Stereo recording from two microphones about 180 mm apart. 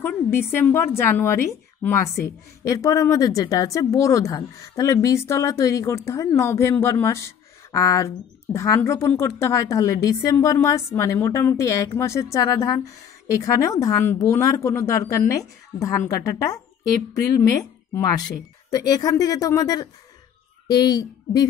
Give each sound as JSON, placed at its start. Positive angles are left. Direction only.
{"t": 0.0, "sound": "a woman's voice", "side_deg": 15}
{"t": 18.7, "sound": "speech", "side_deg": 20}